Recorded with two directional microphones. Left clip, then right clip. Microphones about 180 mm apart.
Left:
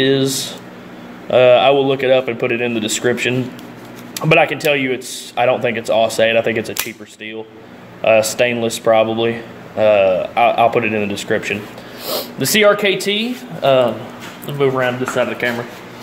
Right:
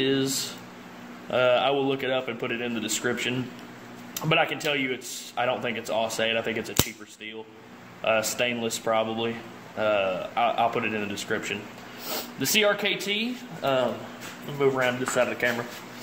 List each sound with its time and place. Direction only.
0.0 s speech: 25° left (ahead or behind)
1.3 s speech: 25° left (ahead or behind)
8.0 s speech: 25° left (ahead or behind)
14.6 s speech: 10° left (ahead or behind)
15.2 s speech: centre (ahead or behind)